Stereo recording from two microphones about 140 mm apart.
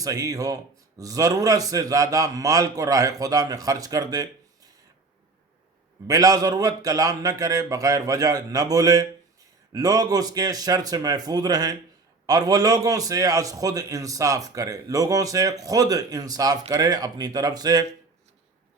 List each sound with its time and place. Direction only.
0.0 s a man's voice: 25° right (ahead or behind)
6.1 s a man's voice: 25° right (ahead or behind)